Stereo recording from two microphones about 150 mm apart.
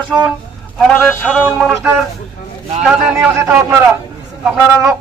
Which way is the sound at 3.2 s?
15° right (ahead or behind).